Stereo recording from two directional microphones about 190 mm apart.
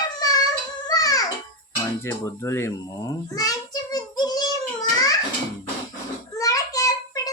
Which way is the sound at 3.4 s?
20° left (ahead or behind).